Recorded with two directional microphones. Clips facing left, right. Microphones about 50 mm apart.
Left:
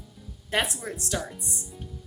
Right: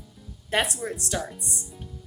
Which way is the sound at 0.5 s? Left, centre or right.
Centre.